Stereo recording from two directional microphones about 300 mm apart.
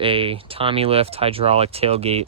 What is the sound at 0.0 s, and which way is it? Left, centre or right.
Speech, centre.